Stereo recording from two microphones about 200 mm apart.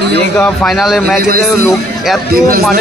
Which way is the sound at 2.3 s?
50° right (ahead or behind).